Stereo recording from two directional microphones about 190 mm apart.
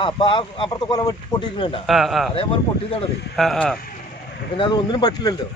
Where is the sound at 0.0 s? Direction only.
25° left (ahead or behind).